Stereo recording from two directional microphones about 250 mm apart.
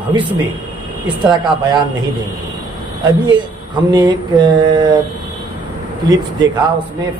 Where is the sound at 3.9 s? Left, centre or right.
Centre.